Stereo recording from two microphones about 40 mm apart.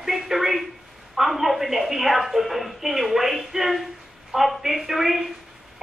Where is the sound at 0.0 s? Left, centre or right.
Centre.